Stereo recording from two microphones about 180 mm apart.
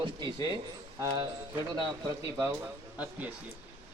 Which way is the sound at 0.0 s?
25° right (ahead or behind).